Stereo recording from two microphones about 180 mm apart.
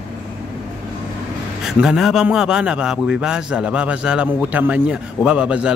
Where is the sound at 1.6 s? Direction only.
Centre (ahead or behind).